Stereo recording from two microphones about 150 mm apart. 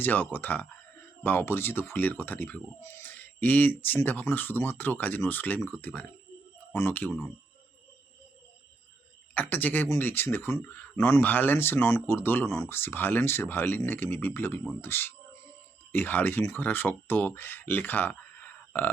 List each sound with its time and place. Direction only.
0.0 s speech: 15° left (ahead or behind)
9.3 s speech: 10° left (ahead or behind)